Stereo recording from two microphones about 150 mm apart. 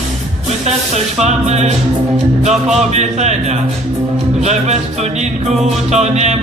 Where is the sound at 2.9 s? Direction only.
50° right (ahead or behind).